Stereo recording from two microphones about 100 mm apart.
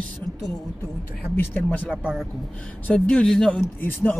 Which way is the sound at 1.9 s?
10° right (ahead or behind).